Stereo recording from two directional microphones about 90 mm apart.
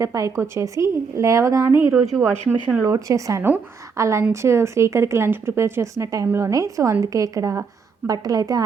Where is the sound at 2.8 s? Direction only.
40° right (ahead or behind).